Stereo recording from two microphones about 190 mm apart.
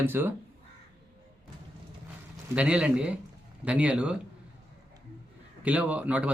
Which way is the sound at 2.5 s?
5° right (ahead or behind).